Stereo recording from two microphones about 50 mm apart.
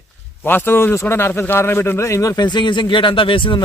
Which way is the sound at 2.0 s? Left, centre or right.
Left.